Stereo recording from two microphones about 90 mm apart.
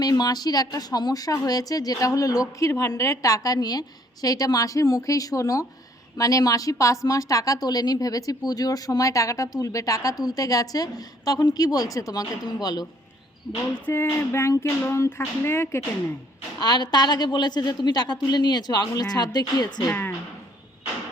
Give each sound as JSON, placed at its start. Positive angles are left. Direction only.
{"t": 0.0, "sound": "a woman's voice", "side_deg": 45}
{"t": 13.8, "sound": "speech", "side_deg": 25}
{"t": 16.6, "sound": "a woman's voice", "side_deg": 50}
{"t": 19.9, "sound": "speech", "side_deg": 20}